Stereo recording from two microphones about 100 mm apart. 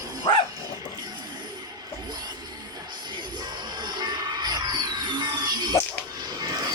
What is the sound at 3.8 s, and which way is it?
Music, 45° right (ahead or behind).